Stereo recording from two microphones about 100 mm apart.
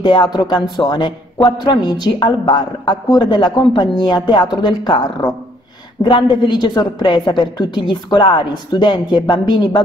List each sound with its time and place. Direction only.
0.0 s a man's voice: 55° left (ahead or behind)
6.0 s a man's voice: 55° left (ahead or behind)